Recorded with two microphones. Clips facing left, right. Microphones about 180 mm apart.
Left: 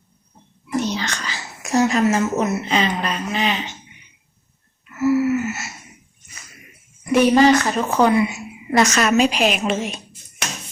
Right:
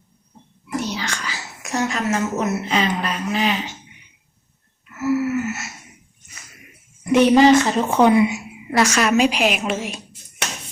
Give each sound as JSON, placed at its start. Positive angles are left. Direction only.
{"t": 0.8, "sound": "whispering", "side_deg": -10}
{"t": 1.6, "sound": "a sound", "side_deg": 35}
{"t": 2.0, "sound": "speech", "side_deg": 0}
{"t": 5.0, "sound": "gasp", "side_deg": 0}
{"t": 7.0, "sound": "a woman's voice", "side_deg": -20}